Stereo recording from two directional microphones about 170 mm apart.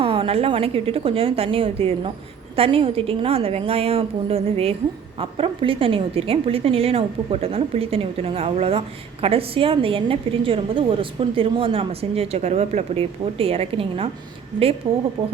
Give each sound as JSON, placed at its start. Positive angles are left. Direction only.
{"t": 0.0, "sound": "a woman's voice", "side_deg": -30}